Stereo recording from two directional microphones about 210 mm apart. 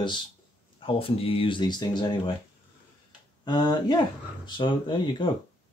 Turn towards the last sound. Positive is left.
turn(degrees=20)  # may be behind; listen again after turning